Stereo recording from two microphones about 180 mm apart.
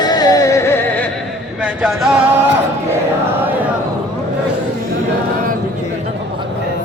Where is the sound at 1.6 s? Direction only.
5° right (ahead or behind).